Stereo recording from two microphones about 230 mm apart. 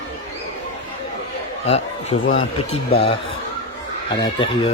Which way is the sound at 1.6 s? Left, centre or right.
Left.